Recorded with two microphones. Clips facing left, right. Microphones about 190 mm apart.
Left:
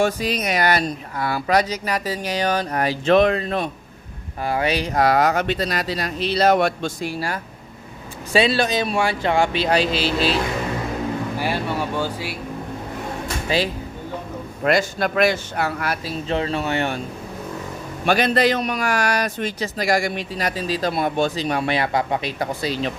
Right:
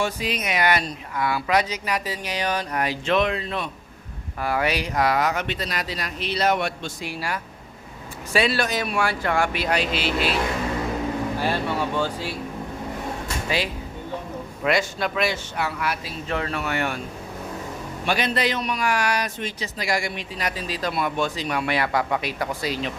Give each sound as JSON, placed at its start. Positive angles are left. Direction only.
{"t": 0.0, "sound": "a man's voice", "side_deg": 40}
{"t": 4.4, "sound": "a man's voice", "side_deg": 25}
{"t": 8.3, "sound": "speech", "side_deg": 25}
{"t": 11.3, "sound": "speech", "side_deg": 10}
{"t": 13.5, "sound": "speech", "side_deg": 30}
{"t": 14.6, "sound": "a man's voice", "side_deg": 45}
{"t": 16.3, "sound": "speech", "side_deg": 25}
{"t": 18.0, "sound": "a man's voice", "side_deg": 45}